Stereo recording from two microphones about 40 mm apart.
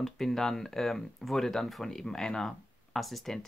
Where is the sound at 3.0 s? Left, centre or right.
Centre.